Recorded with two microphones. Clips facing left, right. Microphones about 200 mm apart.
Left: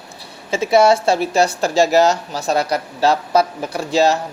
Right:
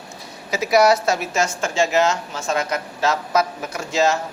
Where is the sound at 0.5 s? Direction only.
25° left (ahead or behind).